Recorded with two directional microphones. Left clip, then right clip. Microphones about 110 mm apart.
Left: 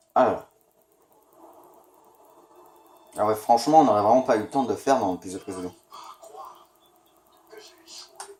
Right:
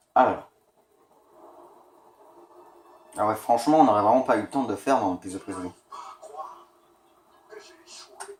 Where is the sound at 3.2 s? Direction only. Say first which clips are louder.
Left 2 dB; 90° left.